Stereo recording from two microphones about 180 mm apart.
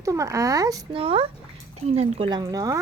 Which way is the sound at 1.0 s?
30° right (ahead or behind).